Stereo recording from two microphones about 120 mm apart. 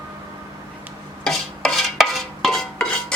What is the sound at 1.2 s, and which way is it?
Stir, 5° left (ahead or behind).